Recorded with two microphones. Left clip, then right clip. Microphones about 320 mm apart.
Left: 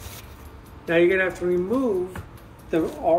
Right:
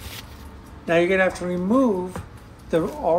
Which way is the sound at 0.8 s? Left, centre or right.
Right.